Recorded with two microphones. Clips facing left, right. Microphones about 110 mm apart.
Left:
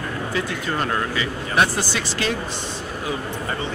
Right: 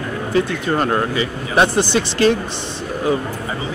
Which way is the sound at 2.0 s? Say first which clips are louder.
Right 12 dB; 40° right (ahead or behind).